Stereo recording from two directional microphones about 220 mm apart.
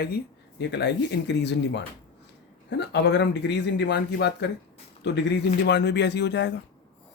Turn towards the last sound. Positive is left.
turn(degrees=50)  # may be behind; listen again after turning